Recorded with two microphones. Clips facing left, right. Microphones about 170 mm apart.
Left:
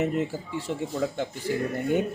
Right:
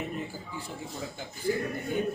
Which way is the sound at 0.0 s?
80° left.